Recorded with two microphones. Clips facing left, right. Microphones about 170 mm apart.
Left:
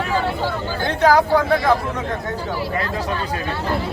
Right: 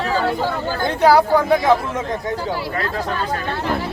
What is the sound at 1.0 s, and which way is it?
Speech, 10° right (ahead or behind).